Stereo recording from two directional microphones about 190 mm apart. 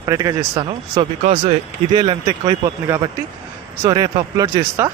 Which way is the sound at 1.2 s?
35° right (ahead or behind).